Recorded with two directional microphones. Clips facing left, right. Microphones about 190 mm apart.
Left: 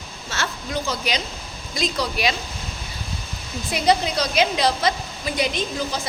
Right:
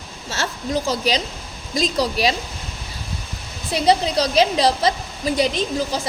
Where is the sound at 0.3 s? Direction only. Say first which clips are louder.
Right 4 dB; 40° right (ahead or behind).